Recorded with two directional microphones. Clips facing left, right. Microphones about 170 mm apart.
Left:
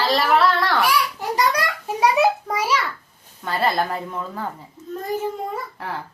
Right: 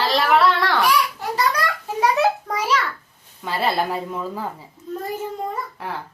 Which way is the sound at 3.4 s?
5° right (ahead or behind).